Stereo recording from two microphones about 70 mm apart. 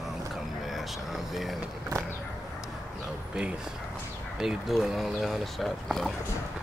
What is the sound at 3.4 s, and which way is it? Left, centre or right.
Speech, centre.